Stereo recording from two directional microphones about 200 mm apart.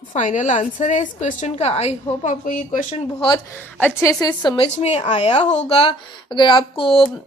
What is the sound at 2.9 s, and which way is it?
Speech, 25° left (ahead or behind).